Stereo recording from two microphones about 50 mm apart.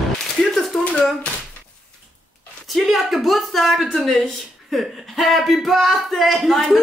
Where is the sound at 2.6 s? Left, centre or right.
Centre.